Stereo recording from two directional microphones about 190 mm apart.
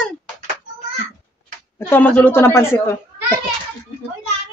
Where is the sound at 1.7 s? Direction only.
10° left (ahead or behind).